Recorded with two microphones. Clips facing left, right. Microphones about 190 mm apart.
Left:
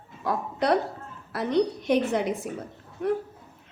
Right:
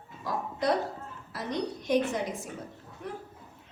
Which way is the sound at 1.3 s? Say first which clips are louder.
Left 9 dB; 65° left (ahead or behind).